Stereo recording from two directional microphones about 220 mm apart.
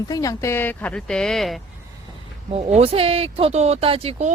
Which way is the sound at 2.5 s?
25° right (ahead or behind).